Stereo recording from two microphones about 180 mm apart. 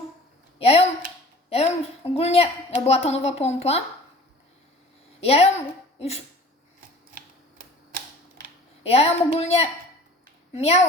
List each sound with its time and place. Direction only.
0.6 s a sound: 35° left (ahead or behind)
2.1 s a woman's voice: 35° left (ahead or behind)
5.2 s a woman's voice: 35° left (ahead or behind)
8.8 s a woman's voice: 35° left (ahead or behind)